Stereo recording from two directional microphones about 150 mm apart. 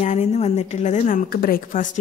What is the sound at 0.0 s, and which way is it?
A woman's voice, 50° left (ahead or behind).